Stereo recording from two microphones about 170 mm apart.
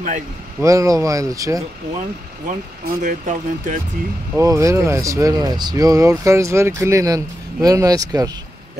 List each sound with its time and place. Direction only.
0.6 s speech: 20° right (ahead or behind)
2.4 s speech: 50° right (ahead or behind)
4.4 s speech: 20° right (ahead or behind)